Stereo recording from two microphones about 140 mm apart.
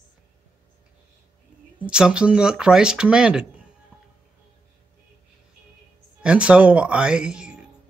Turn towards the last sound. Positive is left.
turn(degrees=-5)  # may be behind; listen again after turning